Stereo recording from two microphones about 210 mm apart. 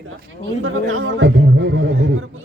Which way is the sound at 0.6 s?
80° right.